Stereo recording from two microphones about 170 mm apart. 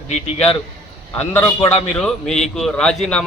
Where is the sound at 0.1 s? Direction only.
40° left (ahead or behind).